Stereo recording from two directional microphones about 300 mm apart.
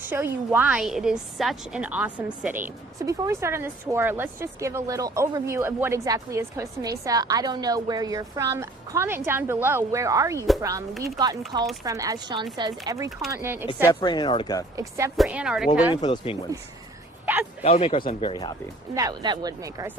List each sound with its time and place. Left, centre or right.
0.0 s a woman's voice: centre
13.8 s speech: centre
14.8 s speech: centre
16.0 s speech: centre
17.6 s speech: centre
18.9 s a woman's voice: centre